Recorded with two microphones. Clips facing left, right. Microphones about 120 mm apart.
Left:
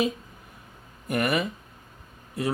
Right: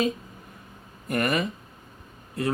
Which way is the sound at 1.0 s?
10° left (ahead or behind).